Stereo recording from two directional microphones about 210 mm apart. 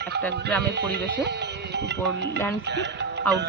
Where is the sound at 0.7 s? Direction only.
50° right (ahead or behind).